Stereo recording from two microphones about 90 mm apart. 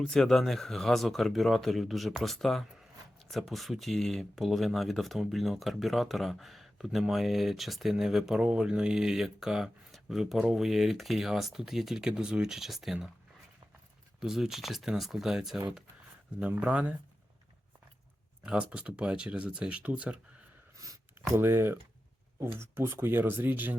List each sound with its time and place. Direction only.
0.0 s speech: 5° left (ahead or behind)
14.2 s speech: 5° right (ahead or behind)
18.4 s speech: 10° right (ahead or behind)
20.7 s a sound: 40° right (ahead or behind)
21.3 s speech: 25° right (ahead or behind)